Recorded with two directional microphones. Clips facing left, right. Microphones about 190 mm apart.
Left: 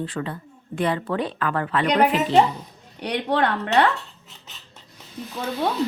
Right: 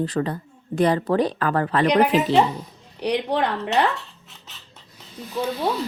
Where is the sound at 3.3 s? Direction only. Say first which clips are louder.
Left 6 dB; 65° left (ahead or behind).